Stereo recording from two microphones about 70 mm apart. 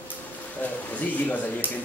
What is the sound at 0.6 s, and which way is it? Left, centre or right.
Speech, left.